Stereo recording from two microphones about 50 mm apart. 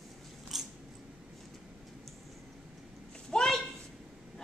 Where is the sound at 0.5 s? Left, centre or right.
Centre.